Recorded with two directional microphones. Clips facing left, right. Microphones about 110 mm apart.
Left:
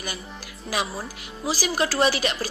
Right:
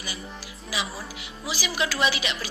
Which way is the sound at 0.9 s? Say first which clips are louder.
Left 3 dB; 40° left (ahead or behind).